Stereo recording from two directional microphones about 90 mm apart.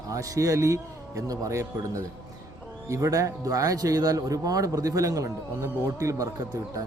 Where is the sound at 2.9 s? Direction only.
40° right (ahead or behind).